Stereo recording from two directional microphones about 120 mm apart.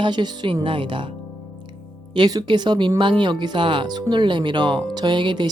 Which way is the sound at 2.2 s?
35° right (ahead or behind).